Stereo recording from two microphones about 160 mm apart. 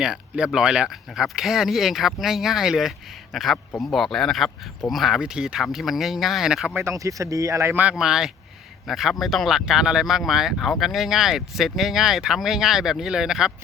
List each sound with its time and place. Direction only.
0.0 s speech: 5° right (ahead or behind)
6.7 s speech: 20° right (ahead or behind); by 13.5 s 5° right (ahead or behind)